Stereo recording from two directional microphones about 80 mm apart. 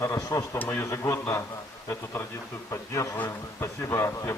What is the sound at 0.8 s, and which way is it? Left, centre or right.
Speech, left.